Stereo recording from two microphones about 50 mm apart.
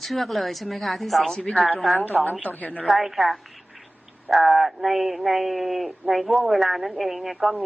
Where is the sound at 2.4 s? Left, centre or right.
Left.